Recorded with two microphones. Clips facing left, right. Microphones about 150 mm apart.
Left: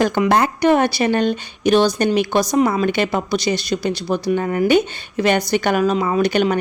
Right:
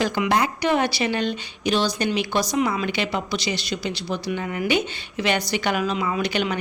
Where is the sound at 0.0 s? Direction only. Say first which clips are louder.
Left 5 dB; 50° left (ahead or behind).